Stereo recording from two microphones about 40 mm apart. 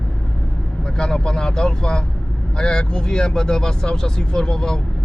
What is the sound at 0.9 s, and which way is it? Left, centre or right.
Speech, centre.